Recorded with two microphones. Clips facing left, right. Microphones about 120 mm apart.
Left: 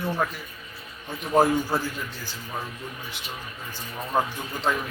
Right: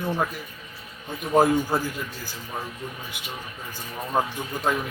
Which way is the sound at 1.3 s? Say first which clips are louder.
Right 1 dB; 15° right (ahead or behind).